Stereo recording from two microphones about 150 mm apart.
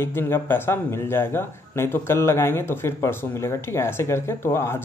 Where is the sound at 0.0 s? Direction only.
15° left (ahead or behind).